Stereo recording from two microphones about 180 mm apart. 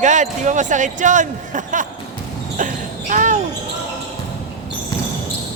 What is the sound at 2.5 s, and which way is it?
Basketball bounce, 45° right (ahead or behind).